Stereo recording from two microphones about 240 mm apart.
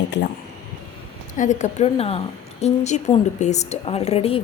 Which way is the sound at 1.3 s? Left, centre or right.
Left.